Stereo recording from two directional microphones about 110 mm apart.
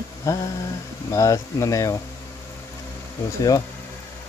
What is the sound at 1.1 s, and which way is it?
Speech, 30° left (ahead or behind).